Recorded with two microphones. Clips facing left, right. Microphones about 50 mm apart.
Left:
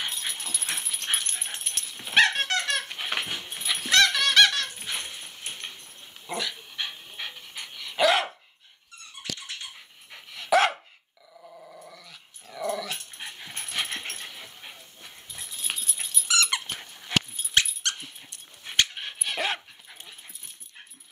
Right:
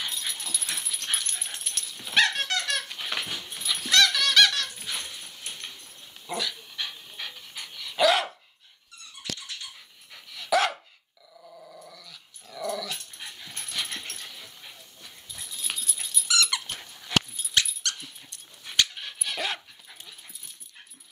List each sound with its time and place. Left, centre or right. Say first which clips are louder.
0.0 s dog: left 1 dB; left
11.4 s dog: left 1 dB; centre; by 16.3 s left
16.3 s squeak: left 1 dB; centre; by 17.6 s left
17.6 s dog: left 2 dB; centre